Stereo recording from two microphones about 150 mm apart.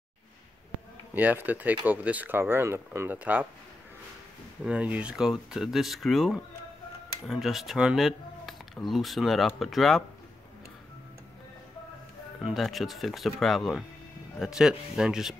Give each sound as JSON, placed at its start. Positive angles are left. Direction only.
{"t": 1.1, "sound": "speech", "side_deg": -10}
{"t": 4.6, "sound": "speech", "side_deg": -10}
{"t": 12.4, "sound": "speech", "side_deg": 0}